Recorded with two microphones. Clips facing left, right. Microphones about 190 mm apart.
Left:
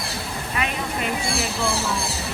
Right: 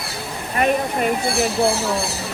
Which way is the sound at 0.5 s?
45° right (ahead or behind).